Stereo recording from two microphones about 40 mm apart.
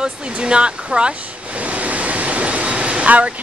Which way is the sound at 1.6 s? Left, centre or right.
Right.